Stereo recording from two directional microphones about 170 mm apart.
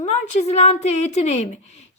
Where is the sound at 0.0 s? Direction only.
40° left (ahead or behind).